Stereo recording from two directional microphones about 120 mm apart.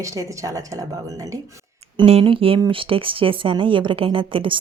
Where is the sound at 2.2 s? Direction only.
50° right (ahead or behind).